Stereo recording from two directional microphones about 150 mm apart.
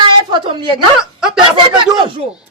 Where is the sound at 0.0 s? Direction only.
35° right (ahead or behind).